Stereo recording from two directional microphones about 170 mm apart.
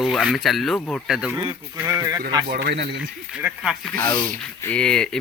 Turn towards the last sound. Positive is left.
turn(degrees=5)  # may be behind; listen again after turning